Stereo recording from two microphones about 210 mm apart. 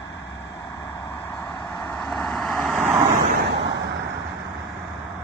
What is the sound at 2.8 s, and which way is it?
Vehicle, 10° right (ahead or behind).